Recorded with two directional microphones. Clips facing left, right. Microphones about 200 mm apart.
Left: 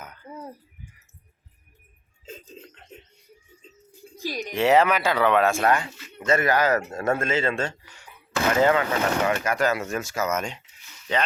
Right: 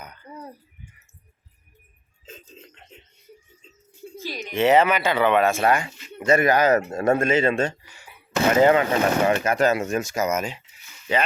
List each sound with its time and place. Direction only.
0.0 s cough: centre (ahead or behind)
4.2 s speech: 15° left (ahead or behind)
4.5 s speech: centre (ahead or behind); by 7.9 s 20° right (ahead or behind)
7.9 s a sound: 10° right (ahead or behind)
8.3 s speech: 20° right (ahead or behind)